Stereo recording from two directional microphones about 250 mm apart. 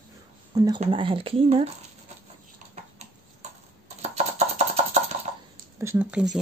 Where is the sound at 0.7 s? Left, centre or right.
Right.